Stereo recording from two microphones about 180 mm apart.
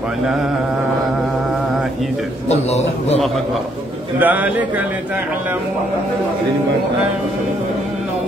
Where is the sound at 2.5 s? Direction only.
35° left (ahead or behind).